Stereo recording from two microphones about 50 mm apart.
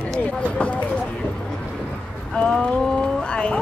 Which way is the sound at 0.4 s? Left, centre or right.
Left.